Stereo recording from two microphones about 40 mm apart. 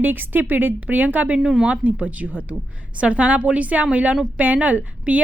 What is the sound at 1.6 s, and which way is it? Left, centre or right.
A woman's voice, right.